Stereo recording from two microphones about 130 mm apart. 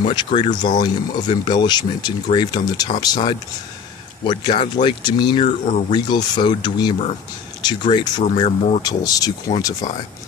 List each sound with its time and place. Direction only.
0.0 s speech: 40° left (ahead or behind)
5.4 s speech: 65° left (ahead or behind)
5.9 s speech: 35° left (ahead or behind)
8.4 s speech: 50° left (ahead or behind)
8.8 s speech: 30° left (ahead or behind)